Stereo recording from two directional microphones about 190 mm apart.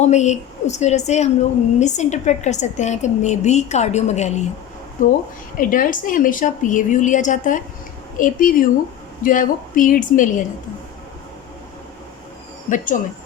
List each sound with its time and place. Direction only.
0.0 s a woman's voice: 35° left (ahead or behind)
12.7 s a woman's voice: 45° left (ahead or behind)